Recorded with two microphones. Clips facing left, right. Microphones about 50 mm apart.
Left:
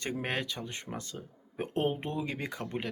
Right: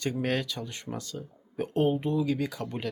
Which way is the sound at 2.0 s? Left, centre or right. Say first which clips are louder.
Right 7 dB; left.